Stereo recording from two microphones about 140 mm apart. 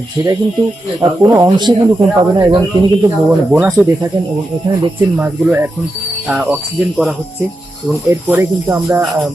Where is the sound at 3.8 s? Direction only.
10° right (ahead or behind).